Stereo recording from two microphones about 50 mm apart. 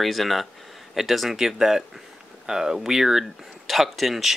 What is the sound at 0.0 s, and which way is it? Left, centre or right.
Speech, centre.